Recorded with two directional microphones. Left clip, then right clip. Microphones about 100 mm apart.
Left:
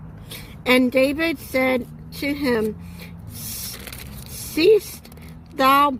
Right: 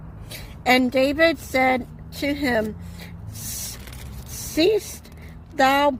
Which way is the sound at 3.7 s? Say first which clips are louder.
Left 5 dB; 90° left.